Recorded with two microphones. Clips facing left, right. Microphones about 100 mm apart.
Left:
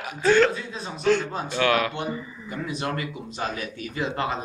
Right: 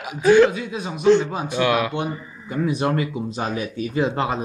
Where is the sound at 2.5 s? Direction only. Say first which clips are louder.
Right 8 dB; 25° right (ahead or behind).